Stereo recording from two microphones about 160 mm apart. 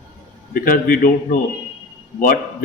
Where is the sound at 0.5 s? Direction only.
60° left (ahead or behind).